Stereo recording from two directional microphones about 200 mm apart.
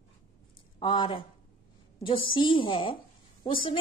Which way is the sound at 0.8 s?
25° left (ahead or behind).